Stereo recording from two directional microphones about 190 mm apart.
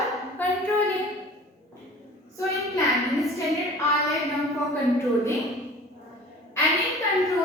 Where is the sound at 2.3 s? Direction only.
15° left (ahead or behind).